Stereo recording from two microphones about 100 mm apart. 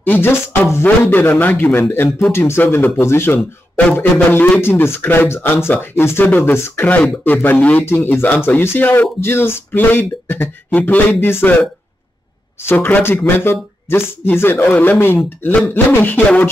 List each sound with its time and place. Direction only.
0.0 s speech: 20° left (ahead or behind)
12.6 s speech: 20° left (ahead or behind)